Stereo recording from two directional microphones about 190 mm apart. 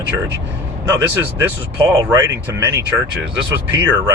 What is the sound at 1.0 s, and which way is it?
Speech, 10° right (ahead or behind).